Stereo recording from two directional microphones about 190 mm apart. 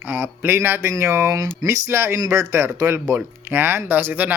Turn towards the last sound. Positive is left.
turn(degrees=-10)  # may be behind; listen again after turning